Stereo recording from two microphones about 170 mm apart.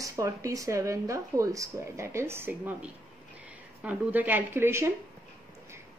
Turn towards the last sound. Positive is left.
turn(degrees=-15)  # may be behind; listen again after turning